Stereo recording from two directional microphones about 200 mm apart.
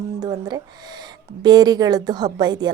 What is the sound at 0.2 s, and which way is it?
Speech, 20° right (ahead or behind).